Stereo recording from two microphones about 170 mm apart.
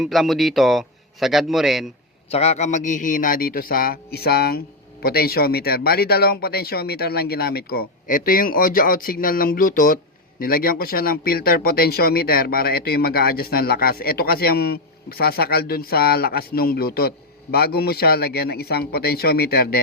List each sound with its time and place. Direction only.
0.0 s a man's voice: centre (ahead or behind)
2.3 s speech: 40° left (ahead or behind); by 19.8 s 65° left (ahead or behind)